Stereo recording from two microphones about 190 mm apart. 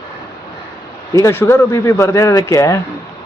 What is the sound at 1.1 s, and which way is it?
A man's voice, 15° left (ahead or behind).